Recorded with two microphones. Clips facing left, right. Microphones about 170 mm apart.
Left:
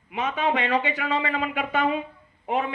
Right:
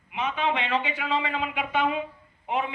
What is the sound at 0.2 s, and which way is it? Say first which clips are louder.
Speech: left 2 dB; 40° left (ahead or behind).